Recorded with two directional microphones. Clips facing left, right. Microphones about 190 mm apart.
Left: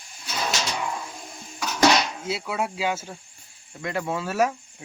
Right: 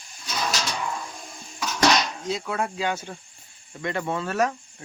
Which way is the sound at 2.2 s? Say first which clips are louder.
Even; 5° left (ahead or behind).